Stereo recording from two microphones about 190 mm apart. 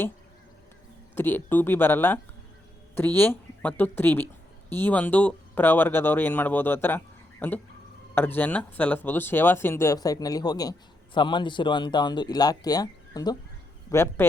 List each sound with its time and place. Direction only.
1.1 s speech: 10° left (ahead or behind)